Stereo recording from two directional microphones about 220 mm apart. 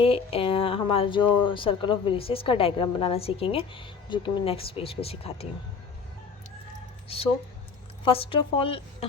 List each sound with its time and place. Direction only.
0.0 s speech: 25° left (ahead or behind)
8.0 s speech: 25° left (ahead or behind)